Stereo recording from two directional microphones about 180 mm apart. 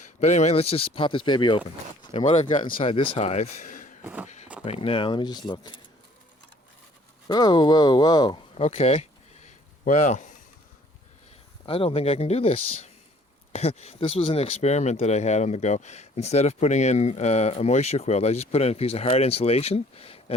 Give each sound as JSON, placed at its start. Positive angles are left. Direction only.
{"t": 0.0, "sound": "speech", "side_deg": 40}
{"t": 2.2, "sound": "speech", "side_deg": 40}
{"t": 2.8, "sound": "speech", "side_deg": 30}
{"t": 4.0, "sound": "speech", "side_deg": -10}
{"t": 4.6, "sound": "speech", "side_deg": 30}
{"t": 7.3, "sound": "speech", "side_deg": 20}
{"t": 8.6, "sound": "a sound", "side_deg": 35}
{"t": 11.6, "sound": "speech", "side_deg": 30}